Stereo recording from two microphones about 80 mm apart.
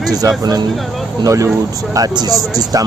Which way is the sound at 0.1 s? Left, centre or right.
Right.